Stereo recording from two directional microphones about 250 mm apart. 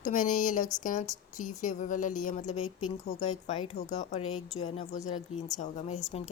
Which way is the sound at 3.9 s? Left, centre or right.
Left.